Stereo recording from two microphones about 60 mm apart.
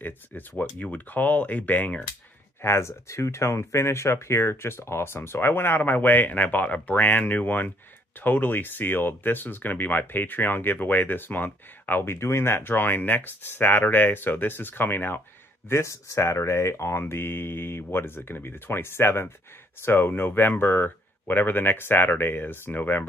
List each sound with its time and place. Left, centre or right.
0.0 s speech: left
2.6 s speech: left
15.7 s speech: left